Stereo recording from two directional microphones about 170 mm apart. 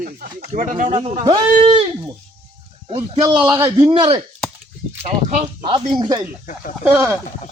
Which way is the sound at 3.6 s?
20° right (ahead or behind).